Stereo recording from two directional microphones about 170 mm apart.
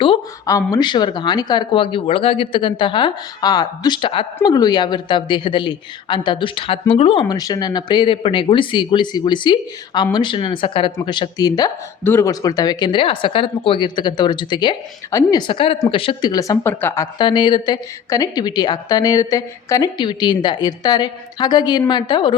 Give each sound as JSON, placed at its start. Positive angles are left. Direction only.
{"t": 0.4, "sound": "a woman's voice", "side_deg": 20}
{"t": 17.2, "sound": "a woman's voice", "side_deg": 25}